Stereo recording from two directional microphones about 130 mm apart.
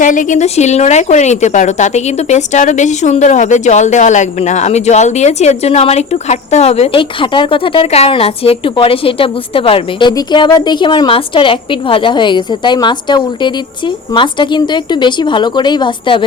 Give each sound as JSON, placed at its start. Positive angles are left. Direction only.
{"t": 0.0, "sound": "speech", "side_deg": 80}